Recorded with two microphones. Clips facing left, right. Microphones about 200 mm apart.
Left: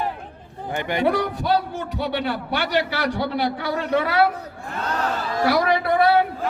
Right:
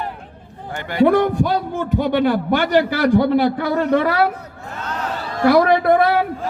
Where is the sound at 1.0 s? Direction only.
50° right (ahead or behind).